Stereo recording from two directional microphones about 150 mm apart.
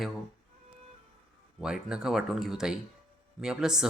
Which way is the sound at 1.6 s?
5° right (ahead or behind).